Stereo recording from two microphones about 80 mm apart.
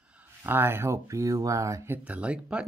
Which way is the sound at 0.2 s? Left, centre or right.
Right.